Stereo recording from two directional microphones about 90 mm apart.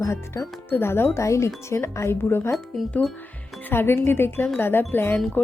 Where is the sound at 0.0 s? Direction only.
35° left (ahead or behind).